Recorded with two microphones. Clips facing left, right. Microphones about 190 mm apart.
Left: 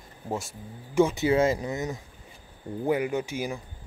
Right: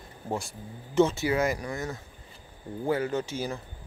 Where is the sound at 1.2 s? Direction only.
25° left (ahead or behind).